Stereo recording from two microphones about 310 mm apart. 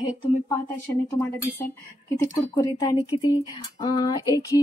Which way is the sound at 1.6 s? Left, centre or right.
Centre.